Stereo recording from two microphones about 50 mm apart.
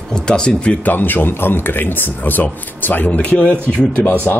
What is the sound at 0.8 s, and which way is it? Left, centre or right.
Speech, left.